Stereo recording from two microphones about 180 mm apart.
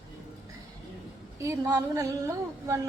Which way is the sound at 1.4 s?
15° right (ahead or behind).